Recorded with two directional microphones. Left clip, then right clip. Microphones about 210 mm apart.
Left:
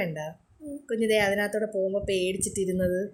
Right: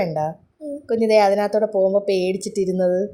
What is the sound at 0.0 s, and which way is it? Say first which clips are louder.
A woman's voice: right 10 dB; 10° right (ahead or behind).